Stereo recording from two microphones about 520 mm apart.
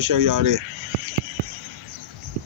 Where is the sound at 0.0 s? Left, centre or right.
Right.